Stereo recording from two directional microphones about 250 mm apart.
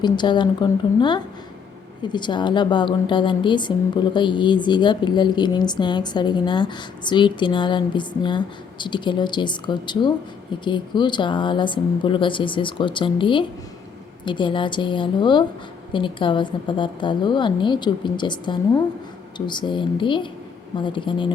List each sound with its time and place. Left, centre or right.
0.0 s a woman's voice: centre